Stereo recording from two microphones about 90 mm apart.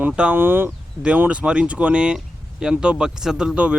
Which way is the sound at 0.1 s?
10° right (ahead or behind).